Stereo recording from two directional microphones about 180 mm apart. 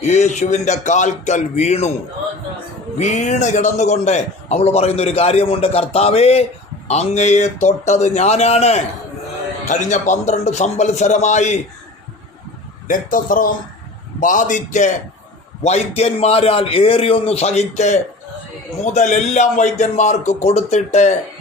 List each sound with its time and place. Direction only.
0.1 s a man's voice: 40° left (ahead or behind)
3.0 s a man's voice: 40° left (ahead or behind)
12.9 s a man's voice: 50° left (ahead or behind)